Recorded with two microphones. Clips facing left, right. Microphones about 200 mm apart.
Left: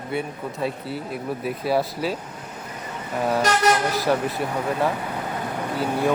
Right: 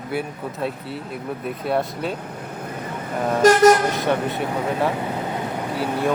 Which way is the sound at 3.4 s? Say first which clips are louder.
Right 9 dB; 45° right (ahead or behind).